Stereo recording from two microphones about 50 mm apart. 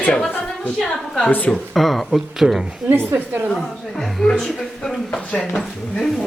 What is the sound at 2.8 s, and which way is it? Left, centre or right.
Speech, right.